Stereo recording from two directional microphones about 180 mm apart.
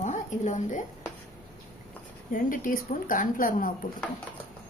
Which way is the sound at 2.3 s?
50° left (ahead or behind).